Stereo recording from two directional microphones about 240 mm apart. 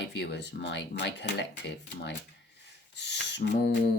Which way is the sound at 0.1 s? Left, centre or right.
Left.